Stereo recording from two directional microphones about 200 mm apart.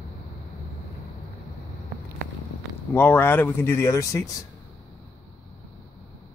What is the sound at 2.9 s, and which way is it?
Speech, 10° left (ahead or behind).